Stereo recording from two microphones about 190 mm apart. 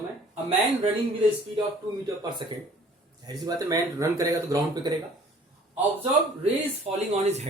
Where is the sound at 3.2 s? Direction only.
20° right (ahead or behind).